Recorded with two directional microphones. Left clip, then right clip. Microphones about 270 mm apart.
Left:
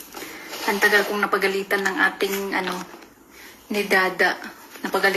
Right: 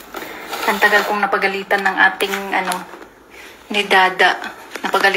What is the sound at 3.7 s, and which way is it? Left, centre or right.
Speech, centre.